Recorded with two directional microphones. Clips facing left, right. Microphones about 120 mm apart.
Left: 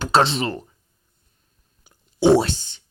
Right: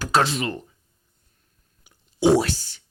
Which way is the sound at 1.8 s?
30° left (ahead or behind).